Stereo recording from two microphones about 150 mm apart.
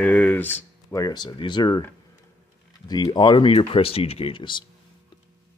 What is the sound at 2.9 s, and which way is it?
Speech, 30° left (ahead or behind).